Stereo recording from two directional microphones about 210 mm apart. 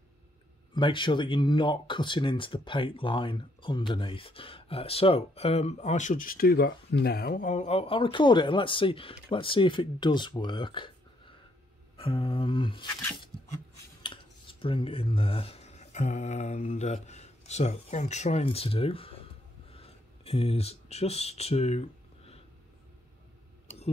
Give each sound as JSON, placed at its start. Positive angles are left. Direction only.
{"t": 0.7, "sound": "speech", "side_deg": 25}
{"t": 14.0, "sound": "speech", "side_deg": 25}